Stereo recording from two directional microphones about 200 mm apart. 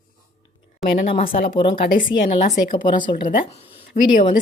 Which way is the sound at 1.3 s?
25° left (ahead or behind).